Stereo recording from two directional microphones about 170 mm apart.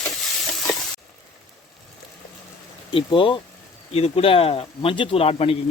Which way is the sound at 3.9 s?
35° left (ahead or behind).